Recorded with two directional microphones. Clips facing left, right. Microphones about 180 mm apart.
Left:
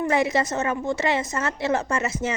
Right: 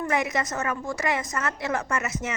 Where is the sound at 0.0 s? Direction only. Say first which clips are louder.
Left 4 dB; 30° left (ahead or behind).